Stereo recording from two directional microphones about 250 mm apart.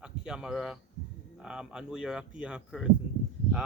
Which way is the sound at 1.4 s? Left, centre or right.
Centre.